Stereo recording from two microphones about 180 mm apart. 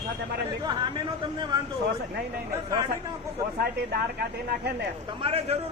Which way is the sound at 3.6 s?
60° right (ahead or behind).